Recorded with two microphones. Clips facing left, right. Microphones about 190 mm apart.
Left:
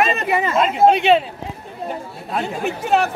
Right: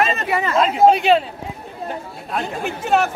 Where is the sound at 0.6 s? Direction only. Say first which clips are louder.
Right 1 dB; centre (ahead or behind).